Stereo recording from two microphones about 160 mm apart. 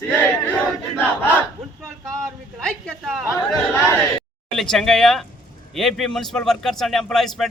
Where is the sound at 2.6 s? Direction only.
5° left (ahead or behind).